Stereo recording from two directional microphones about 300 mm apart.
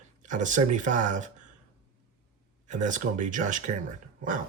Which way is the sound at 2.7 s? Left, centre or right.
Right.